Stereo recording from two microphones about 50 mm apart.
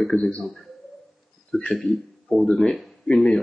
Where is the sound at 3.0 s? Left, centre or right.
Centre.